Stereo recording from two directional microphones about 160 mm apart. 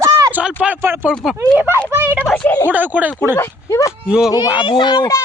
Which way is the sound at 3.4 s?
15° left (ahead or behind).